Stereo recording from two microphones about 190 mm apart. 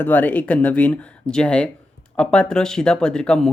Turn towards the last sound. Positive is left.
turn(degrees=5)  # may be behind; listen again after turning